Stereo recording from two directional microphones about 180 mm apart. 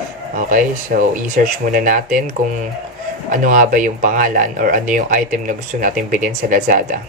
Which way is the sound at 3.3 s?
45° right (ahead or behind).